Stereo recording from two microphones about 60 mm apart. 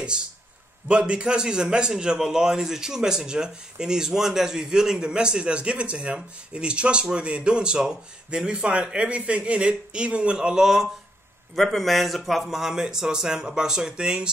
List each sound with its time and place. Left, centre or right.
0.8 s a man's voice: centre
11.5 s a man's voice: centre